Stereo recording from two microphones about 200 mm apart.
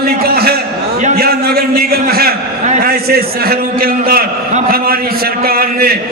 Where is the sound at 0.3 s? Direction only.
50° right (ahead or behind).